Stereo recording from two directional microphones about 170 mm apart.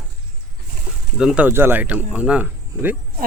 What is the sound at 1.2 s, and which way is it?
Speech, 5° right (ahead or behind).